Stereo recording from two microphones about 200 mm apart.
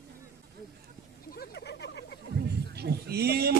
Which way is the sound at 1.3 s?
55° left (ahead or behind).